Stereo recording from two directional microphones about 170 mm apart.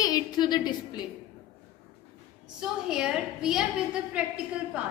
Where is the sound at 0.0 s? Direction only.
25° left (ahead or behind).